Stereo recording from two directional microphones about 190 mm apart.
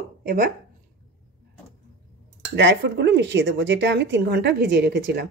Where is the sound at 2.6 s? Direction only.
70° right (ahead or behind).